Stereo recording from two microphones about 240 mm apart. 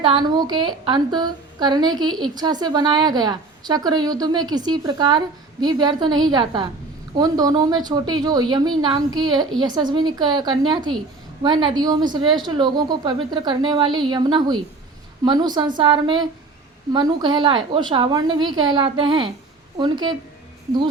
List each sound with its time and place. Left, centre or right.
0.0 s a woman's voice: centre
2.0 s a woman's voice: centre
2.3 s a woman's voice: centre